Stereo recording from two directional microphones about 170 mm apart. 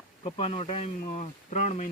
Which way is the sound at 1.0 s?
50° left (ahead or behind).